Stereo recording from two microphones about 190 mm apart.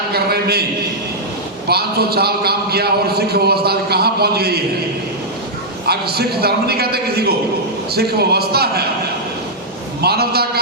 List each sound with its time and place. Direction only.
0.1 s a man's voice: 55° right (ahead or behind)
1.6 s a man's voice: 55° right (ahead or behind)
5.9 s a man's voice: 55° right (ahead or behind)
10.0 s a man's voice: 55° right (ahead or behind)